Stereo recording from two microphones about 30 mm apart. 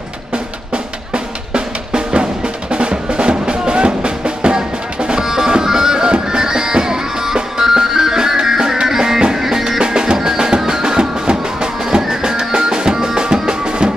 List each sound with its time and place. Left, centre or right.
1.1 s drum: right
2.7 s music: right